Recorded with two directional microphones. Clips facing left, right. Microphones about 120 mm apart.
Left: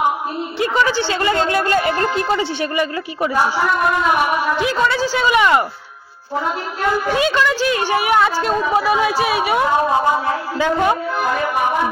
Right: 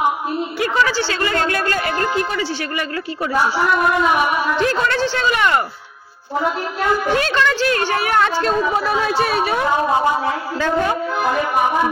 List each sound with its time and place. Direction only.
0.6 s a sound: 20° left (ahead or behind)
4.6 s a woman's voice: 10° left (ahead or behind)
7.2 s a woman's voice: 10° left (ahead or behind)